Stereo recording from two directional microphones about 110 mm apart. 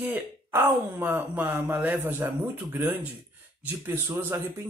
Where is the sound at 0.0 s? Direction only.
20° right (ahead or behind).